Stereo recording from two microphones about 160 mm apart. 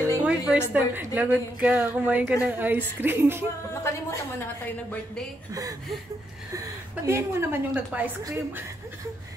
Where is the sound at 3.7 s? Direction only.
20° left (ahead or behind).